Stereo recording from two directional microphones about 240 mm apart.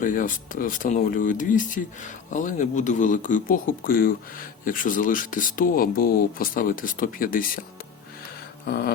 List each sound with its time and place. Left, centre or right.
0.0 s speech: left
8.6 s speech: left